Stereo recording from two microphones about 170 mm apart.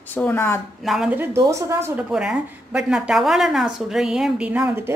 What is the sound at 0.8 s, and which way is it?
A woman's voice, centre (ahead or behind).